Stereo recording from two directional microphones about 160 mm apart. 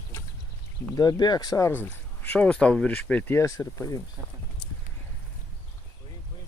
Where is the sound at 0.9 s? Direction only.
25° left (ahead or behind).